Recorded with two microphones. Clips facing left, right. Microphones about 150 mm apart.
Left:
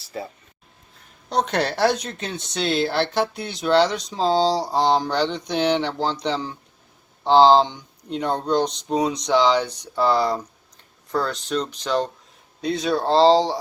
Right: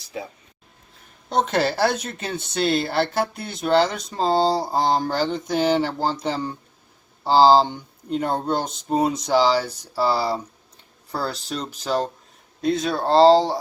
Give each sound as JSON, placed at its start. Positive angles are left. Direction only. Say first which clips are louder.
{"t": 1.3, "sound": "speech", "louder": "right 1 dB", "side_deg": 0}
{"t": 10.2, "sound": "speech", "louder": "left 2 dB", "side_deg": -30}
{"t": 11.6, "sound": "speech", "louder": "right 3 dB", "side_deg": -5}